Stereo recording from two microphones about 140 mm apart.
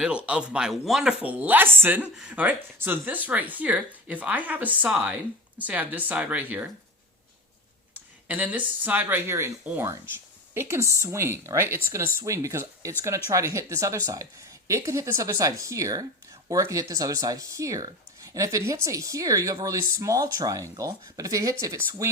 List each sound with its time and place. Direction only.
0.3 s speech: 5° right (ahead or behind)
8.3 s speech: 10° right (ahead or behind)